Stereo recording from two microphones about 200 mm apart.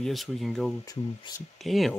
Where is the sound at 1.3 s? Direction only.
25° left (ahead or behind).